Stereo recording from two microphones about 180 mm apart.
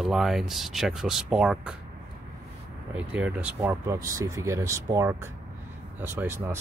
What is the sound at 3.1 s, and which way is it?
Speech, 10° right (ahead or behind).